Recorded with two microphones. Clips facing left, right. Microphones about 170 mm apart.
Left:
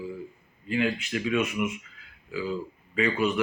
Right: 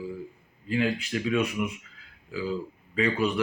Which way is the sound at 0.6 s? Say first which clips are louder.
Even; 35° right (ahead or behind).